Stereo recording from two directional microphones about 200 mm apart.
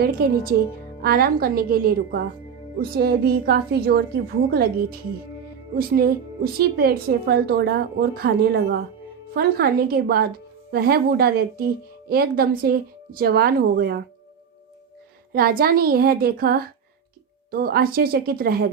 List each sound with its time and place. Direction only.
0.0 s a woman's voice: 50° right (ahead or behind)
15.3 s a woman's voice: 50° right (ahead or behind)